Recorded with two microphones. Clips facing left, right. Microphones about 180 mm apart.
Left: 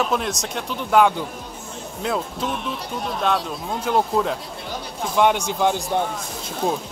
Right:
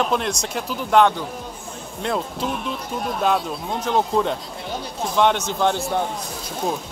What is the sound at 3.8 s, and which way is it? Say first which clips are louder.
Speech: even; 10° left (ahead or behind).